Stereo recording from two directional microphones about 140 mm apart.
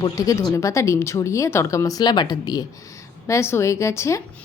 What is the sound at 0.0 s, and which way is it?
Speech, 25° left (ahead or behind).